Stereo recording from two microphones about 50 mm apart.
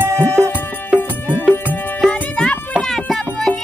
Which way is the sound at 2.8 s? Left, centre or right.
Centre.